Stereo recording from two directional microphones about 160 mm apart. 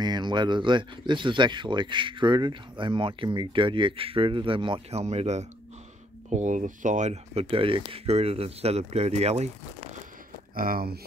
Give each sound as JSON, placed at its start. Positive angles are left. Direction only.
{"t": 0.0, "sound": "speech", "side_deg": -25}
{"t": 10.5, "sound": "speech", "side_deg": -65}